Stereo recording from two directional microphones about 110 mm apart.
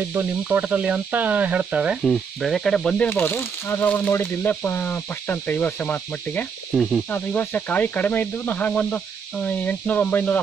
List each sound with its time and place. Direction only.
0.4 s speech: 10° right (ahead or behind)
2.0 s speech: centre (ahead or behind)
3.1 s speech: 20° left (ahead or behind)
6.7 s speech: centre (ahead or behind)
7.1 s speech: 15° left (ahead or behind)